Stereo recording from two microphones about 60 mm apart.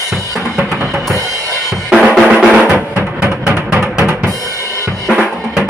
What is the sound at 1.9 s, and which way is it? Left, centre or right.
Drum kit, centre.